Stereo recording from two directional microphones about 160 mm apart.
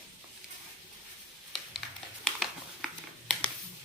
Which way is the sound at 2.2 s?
Centre (ahead or behind).